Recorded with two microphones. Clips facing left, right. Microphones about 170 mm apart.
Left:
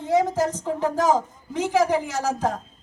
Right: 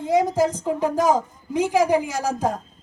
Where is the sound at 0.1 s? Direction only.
15° right (ahead or behind).